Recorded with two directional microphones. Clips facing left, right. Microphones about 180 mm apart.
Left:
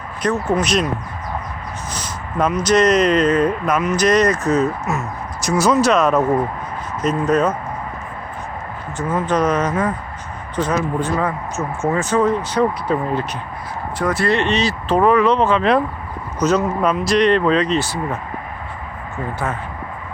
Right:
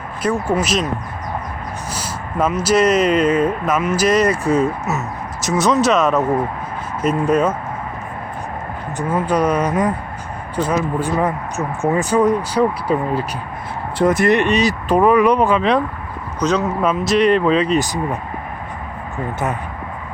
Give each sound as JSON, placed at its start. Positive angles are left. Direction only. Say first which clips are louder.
{"t": 0.4, "sound": "speech", "louder": "even", "side_deg": -5}
{"t": 1.9, "sound": "speech", "louder": "right 2 dB", "side_deg": -5}
{"t": 9.0, "sound": "speech", "louder": "right 1 dB", "side_deg": -10}
{"t": 14.0, "sound": "speech", "louder": "right 4 dB", "side_deg": -20}
{"t": 16.4, "sound": "speech", "louder": "left 1 dB", "side_deg": 5}